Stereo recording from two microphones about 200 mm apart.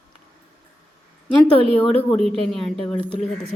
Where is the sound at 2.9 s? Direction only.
30° right (ahead or behind).